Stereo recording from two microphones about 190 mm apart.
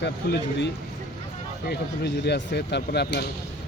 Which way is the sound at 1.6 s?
60° left (ahead or behind).